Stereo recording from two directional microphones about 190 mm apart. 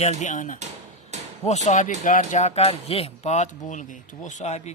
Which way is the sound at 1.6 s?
40° left (ahead or behind).